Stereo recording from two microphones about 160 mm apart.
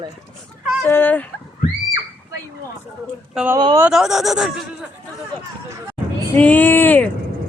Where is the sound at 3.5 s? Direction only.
20° right (ahead or behind).